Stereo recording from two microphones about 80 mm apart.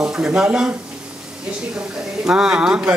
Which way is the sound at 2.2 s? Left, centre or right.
Centre.